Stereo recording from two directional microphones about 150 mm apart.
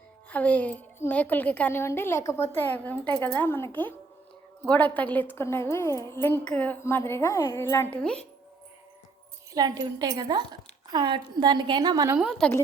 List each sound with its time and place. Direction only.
0.3 s a woman's voice: 10° left (ahead or behind)
8.0 s a woman's voice: 5° left (ahead or behind)
9.5 s a woman's voice: 25° right (ahead or behind)
12.1 s a woman's voice: 5° right (ahead or behind)
12.4 s a woman's voice: 15° left (ahead or behind)